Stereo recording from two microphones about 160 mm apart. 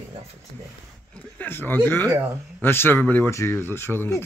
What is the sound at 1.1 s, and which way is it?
Speech, 10° left (ahead or behind).